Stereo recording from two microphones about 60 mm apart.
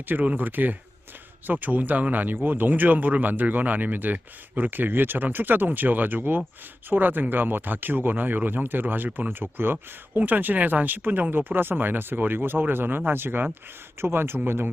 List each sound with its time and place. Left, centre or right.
0.1 s speech: right